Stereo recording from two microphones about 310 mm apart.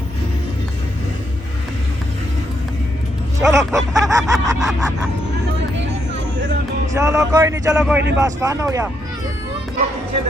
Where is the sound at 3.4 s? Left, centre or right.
Centre.